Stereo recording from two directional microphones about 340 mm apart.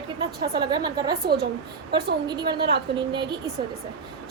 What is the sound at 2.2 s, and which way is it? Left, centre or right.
A woman's voice, centre.